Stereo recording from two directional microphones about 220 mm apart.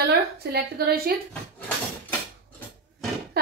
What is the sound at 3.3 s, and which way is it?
Music, 45° right (ahead or behind).